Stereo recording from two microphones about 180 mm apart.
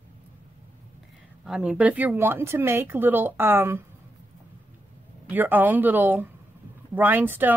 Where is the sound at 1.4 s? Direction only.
5° right (ahead or behind).